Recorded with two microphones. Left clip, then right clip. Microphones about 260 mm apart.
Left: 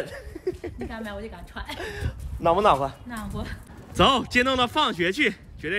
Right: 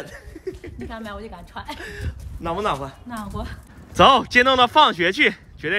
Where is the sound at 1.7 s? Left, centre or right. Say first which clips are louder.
Left 1 dB; centre.